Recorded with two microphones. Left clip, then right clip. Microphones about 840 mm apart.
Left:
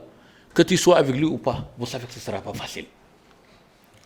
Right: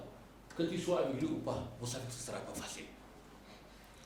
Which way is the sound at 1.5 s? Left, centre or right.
Left.